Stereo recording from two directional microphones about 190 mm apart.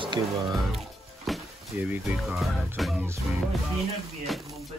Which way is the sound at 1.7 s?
10° right (ahead or behind).